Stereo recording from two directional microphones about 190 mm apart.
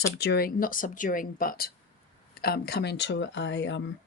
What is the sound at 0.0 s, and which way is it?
Speech, 60° left (ahead or behind).